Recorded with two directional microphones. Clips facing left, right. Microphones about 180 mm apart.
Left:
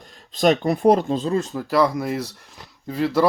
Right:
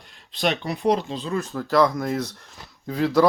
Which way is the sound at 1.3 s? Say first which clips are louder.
Left 4 dB; 20° left (ahead or behind).